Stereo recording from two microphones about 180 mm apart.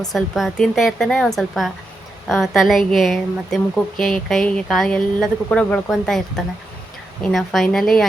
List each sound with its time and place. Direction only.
0.1 s speech: centre (ahead or behind)